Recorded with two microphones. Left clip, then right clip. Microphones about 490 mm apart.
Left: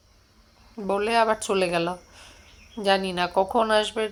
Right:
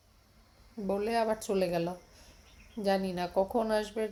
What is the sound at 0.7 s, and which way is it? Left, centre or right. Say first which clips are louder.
Speech: left 8 dB; right.